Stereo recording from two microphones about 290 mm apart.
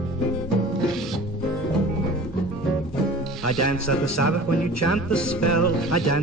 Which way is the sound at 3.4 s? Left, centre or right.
Left.